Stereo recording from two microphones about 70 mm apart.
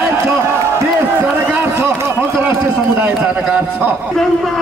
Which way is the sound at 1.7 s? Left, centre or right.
Right.